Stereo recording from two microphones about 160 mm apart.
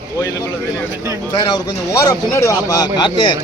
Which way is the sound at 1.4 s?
20° left (ahead or behind).